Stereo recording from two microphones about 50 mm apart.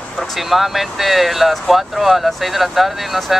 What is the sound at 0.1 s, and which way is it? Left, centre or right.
Speech, centre.